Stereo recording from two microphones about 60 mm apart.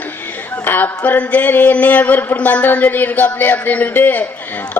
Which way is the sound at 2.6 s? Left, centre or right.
Left.